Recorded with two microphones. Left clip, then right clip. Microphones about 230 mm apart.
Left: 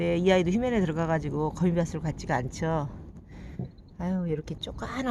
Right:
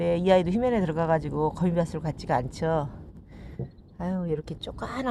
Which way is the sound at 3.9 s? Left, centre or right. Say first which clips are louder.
Right 2 dB; centre.